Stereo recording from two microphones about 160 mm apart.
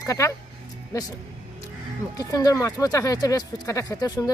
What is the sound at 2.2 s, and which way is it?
Speech, 20° left (ahead or behind).